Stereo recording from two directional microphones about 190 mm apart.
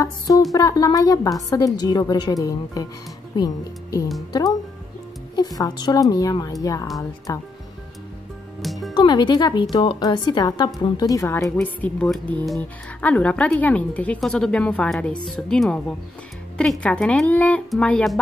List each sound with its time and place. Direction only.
0.5 s a woman's voice: 20° left (ahead or behind)
5.6 s a woman's voice: 20° left (ahead or behind)
8.9 s a woman's voice: 25° left (ahead or behind); by 18.2 s 5° left (ahead or behind)